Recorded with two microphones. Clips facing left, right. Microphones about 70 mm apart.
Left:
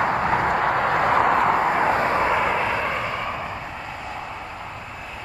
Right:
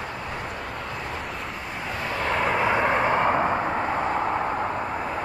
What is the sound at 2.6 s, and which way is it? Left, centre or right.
Vehicle, centre.